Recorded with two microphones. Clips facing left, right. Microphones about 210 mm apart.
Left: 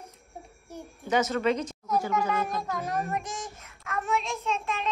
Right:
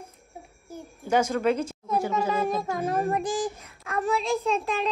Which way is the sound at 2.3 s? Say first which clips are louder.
Right 4 dB; 30° right (ahead or behind).